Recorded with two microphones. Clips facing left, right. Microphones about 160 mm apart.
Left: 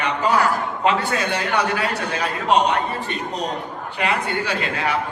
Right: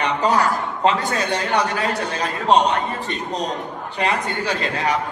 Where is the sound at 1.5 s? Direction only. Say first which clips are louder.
Right 1 dB; 35° right (ahead or behind).